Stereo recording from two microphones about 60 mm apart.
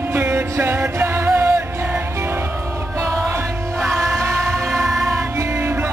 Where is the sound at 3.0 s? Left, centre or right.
Right.